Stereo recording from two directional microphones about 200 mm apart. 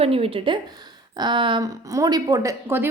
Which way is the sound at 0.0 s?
30° right (ahead or behind).